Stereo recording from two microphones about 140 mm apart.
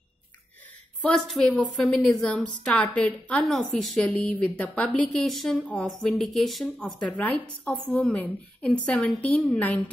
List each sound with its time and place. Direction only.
1.0 s a woman's voice: 5° left (ahead or behind)